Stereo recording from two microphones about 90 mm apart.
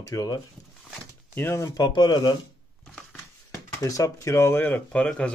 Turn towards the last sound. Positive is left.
turn(degrees=10)  # may be behind; listen again after turning